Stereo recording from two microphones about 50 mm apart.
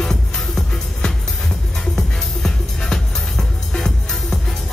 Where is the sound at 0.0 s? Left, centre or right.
Centre.